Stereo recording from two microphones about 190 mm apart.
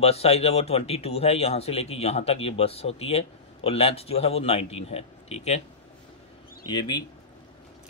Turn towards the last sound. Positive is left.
turn(degrees=20)  # may be behind; listen again after turning